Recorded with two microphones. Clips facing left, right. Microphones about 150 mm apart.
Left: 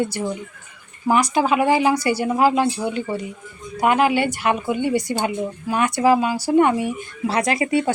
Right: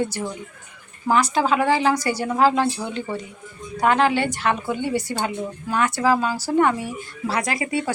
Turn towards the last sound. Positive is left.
turn(degrees=25)  # may be behind; listen again after turning